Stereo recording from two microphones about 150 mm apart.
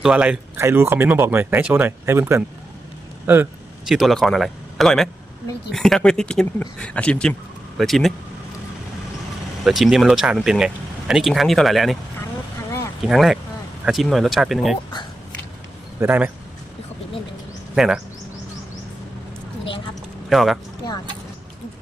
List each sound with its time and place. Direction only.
0.0 s speech: 10° right (ahead or behind)
3.8 s speech: centre (ahead or behind)
9.6 s speech: centre (ahead or behind)
13.0 s speech: centre (ahead or behind)
16.0 s speech: 10° right (ahead or behind)
17.7 s speech: 5° right (ahead or behind)
20.3 s speech: centre (ahead or behind)